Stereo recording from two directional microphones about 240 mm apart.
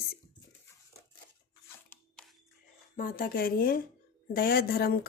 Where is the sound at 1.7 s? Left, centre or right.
Centre.